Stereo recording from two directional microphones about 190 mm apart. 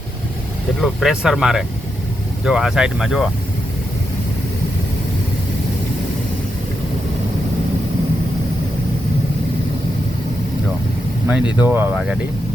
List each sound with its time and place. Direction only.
0.8 s speech: centre (ahead or behind)
11.3 s speech: 5° right (ahead or behind)